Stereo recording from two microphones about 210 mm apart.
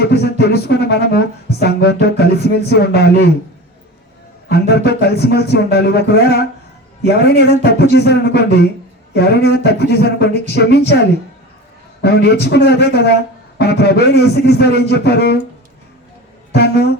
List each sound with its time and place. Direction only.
0.0 s speech: 50° left (ahead or behind)
4.7 s speech: 50° left (ahead or behind)
12.0 s speech: 50° left (ahead or behind)
16.5 s speech: 50° left (ahead or behind)